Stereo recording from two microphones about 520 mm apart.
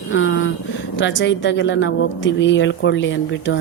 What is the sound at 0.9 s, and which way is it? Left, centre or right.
Speech, left.